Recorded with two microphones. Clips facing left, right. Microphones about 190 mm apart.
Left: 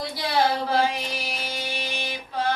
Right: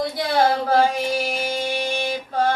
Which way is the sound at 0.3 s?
50° right (ahead or behind).